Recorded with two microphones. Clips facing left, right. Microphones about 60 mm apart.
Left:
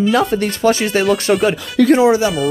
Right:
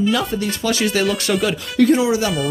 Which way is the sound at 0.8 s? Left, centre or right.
Left.